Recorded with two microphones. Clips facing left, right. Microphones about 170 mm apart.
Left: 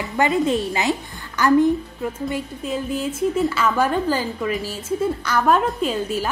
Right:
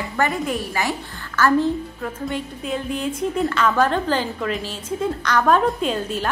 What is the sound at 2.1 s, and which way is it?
A woman's voice, 5° left (ahead or behind).